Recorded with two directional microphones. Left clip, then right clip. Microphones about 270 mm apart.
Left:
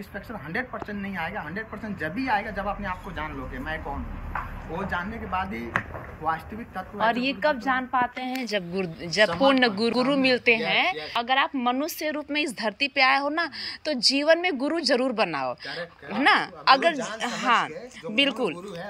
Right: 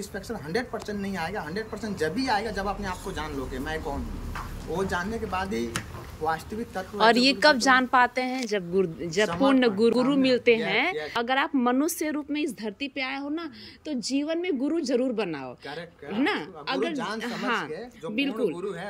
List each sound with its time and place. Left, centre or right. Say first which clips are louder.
0.5 s a woman's voice: right 1 dB; centre